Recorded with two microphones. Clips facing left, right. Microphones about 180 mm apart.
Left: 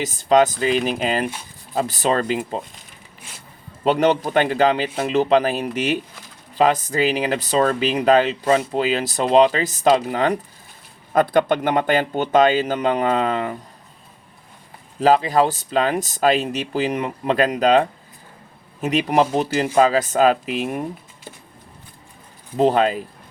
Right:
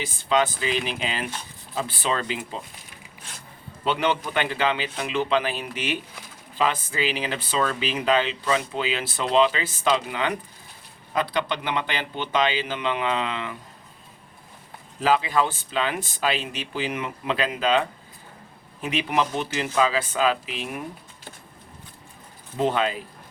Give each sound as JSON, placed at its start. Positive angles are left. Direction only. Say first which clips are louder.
{"t": 0.0, "sound": "speech", "louder": "left 7 dB", "side_deg": 40}
{"t": 3.8, "sound": "speech", "louder": "left 7 dB", "side_deg": 40}
{"t": 15.0, "sound": "speech", "louder": "left 6 dB", "side_deg": 40}
{"t": 22.5, "sound": "speech", "louder": "left 7 dB", "side_deg": 40}